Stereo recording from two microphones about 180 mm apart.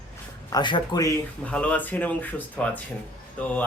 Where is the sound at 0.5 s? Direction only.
25° left (ahead or behind).